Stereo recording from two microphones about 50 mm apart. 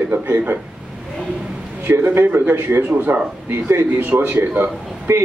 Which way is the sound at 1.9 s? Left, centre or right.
Right.